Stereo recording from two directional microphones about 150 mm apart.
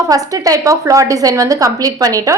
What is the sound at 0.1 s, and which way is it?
A woman's voice, 25° right (ahead or behind).